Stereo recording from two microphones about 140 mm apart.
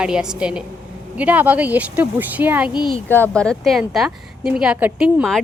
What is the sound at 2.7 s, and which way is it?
Speech, 35° left (ahead or behind).